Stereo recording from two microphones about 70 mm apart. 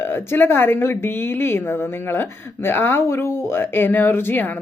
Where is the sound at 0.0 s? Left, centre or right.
Left.